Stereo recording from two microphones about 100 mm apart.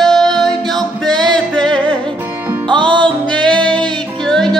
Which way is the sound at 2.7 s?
55° right (ahead or behind).